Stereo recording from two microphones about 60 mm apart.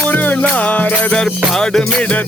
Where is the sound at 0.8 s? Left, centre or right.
Centre.